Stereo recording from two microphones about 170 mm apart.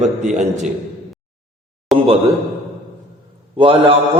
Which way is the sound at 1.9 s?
Centre (ahead or behind).